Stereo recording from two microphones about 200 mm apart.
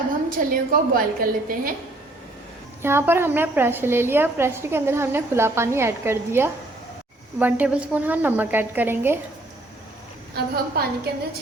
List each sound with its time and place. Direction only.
0.3 s a woman's voice: 45° right (ahead or behind)
2.8 s a woman's voice: 10° right (ahead or behind)
10.3 s a woman's voice: 50° right (ahead or behind)